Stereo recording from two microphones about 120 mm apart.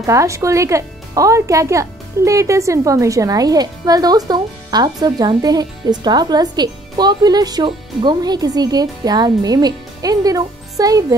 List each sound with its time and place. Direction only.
0.0 s speech: 25° right (ahead or behind)